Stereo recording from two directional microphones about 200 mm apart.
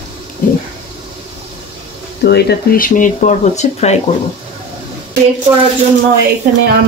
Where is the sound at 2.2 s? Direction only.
55° left (ahead or behind); by 4.0 s 35° left (ahead or behind).